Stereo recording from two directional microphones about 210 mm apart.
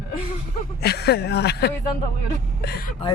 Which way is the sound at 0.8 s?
50° left (ahead or behind).